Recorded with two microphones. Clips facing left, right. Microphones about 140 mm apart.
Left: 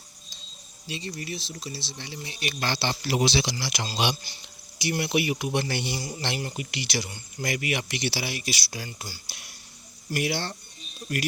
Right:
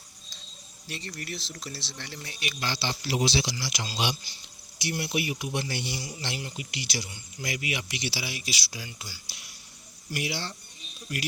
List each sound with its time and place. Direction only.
0.9 s speech: 15° left (ahead or behind)
2.5 s speech: 60° left (ahead or behind)
4.8 s speech: 85° left; by 6.0 s 65° left (ahead or behind)
6.0 s a man's voice: 40° left (ahead or behind)
6.2 s speech: 60° left (ahead or behind)
7.3 s a man's voice: 55° left (ahead or behind)